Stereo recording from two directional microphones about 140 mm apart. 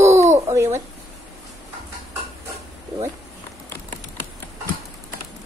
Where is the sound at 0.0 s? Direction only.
20° right (ahead or behind).